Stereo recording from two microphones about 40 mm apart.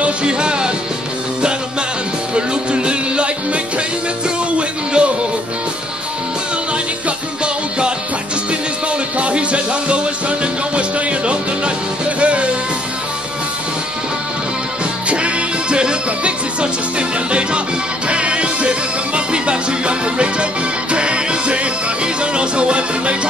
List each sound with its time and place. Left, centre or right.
0.0 s music: right
2.3 s music: right
4.6 s music: right
9.2 s music: right
15.0 s music: right